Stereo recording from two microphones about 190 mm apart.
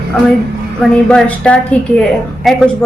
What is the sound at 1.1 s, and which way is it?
A woman's voice, 5° left (ahead or behind).